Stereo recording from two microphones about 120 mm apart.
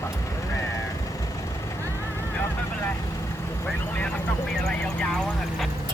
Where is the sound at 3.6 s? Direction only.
10° left (ahead or behind).